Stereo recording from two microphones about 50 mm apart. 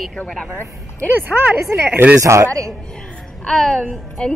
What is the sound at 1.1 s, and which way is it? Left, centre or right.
Speech, right.